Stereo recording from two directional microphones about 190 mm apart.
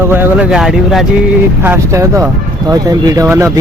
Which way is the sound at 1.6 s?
15° right (ahead or behind).